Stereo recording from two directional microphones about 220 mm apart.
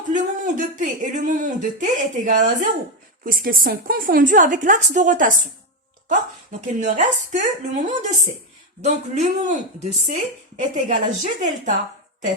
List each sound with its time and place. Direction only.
0.1 s speech: 35° right (ahead or behind)